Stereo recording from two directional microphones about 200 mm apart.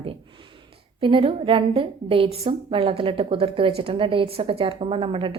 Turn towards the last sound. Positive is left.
turn(degrees=-25)  # may be behind; listen again after turning